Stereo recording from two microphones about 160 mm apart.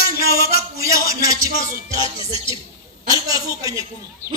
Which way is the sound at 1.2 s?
20° right (ahead or behind).